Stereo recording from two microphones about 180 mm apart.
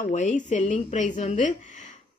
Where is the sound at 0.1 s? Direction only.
40° left (ahead or behind).